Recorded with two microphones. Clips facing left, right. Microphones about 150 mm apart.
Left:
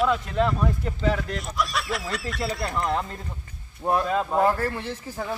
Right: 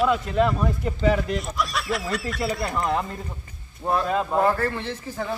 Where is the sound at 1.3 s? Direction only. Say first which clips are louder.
Right 1 dB; centre (ahead or behind).